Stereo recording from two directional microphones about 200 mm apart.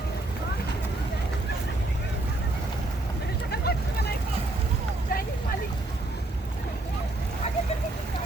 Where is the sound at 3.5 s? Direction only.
50° left (ahead or behind).